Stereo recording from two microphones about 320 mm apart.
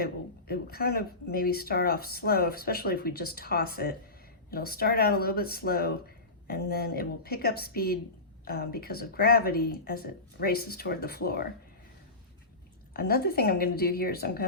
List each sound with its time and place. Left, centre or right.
0.0 s speech: left
12.9 s speech: left